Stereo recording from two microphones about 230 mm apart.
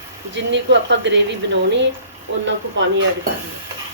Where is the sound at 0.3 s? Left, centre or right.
Right.